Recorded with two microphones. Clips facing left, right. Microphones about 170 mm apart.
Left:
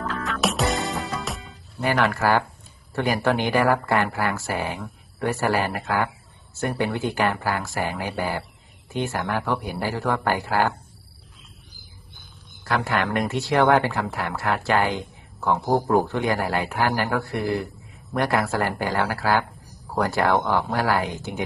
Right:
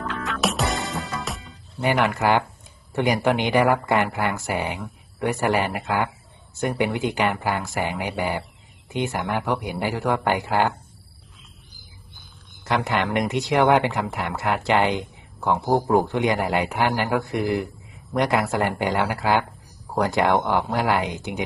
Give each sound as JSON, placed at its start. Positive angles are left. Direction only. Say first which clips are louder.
{"t": 0.2, "sound": "music", "louder": "even", "side_deg": 0}
{"t": 1.8, "sound": "speech", "louder": "right 1 dB", "side_deg": -20}
{"t": 12.6, "sound": "speech", "louder": "right 1 dB", "side_deg": -20}